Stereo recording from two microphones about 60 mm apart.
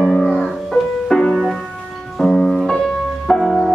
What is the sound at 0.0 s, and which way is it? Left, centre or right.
Music, centre.